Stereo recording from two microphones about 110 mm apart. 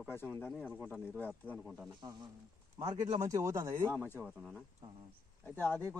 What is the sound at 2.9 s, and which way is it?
Speech, 40° right (ahead or behind).